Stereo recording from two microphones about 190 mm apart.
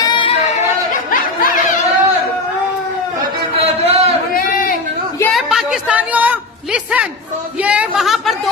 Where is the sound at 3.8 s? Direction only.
35° right (ahead or behind).